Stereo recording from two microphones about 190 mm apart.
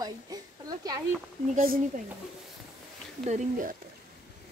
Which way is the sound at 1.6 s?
50° right (ahead or behind).